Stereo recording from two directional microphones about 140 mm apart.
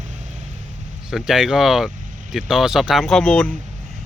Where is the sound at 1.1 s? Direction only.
5° right (ahead or behind).